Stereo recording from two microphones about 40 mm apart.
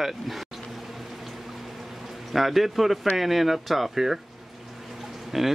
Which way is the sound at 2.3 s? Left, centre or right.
Centre.